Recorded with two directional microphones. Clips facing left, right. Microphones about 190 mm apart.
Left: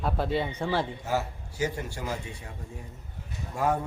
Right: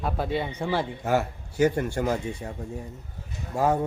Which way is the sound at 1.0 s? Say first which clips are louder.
Right 5 dB; 60° right (ahead or behind).